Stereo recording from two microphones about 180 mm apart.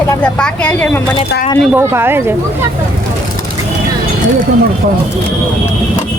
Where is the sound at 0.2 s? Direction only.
5° left (ahead or behind).